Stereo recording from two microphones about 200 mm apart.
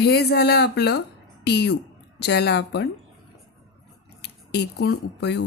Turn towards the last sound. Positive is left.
turn(degrees=60)  # may be behind; listen again after turning